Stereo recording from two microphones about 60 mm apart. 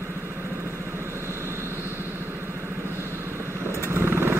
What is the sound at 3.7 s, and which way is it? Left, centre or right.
Vehicle, right.